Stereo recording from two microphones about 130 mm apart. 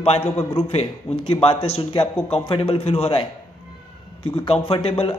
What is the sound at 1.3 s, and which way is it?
Speech, 45° left (ahead or behind).